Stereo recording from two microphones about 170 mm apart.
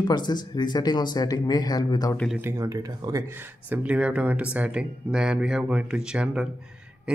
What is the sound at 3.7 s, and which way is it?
Speech, 10° right (ahead or behind).